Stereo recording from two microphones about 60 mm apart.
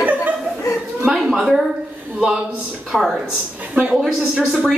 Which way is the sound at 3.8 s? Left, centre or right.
Centre.